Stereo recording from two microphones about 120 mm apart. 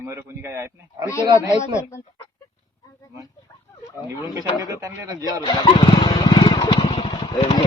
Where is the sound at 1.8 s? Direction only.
25° left (ahead or behind).